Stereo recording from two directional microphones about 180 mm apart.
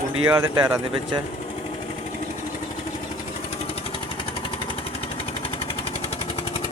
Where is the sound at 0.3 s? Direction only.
15° right (ahead or behind).